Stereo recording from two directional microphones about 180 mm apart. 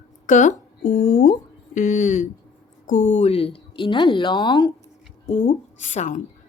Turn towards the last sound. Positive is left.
turn(degrees=45)  # may be behind; listen again after turning